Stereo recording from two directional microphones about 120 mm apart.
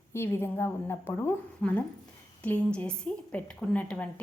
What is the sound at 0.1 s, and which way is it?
A woman's voice, 20° left (ahead or behind).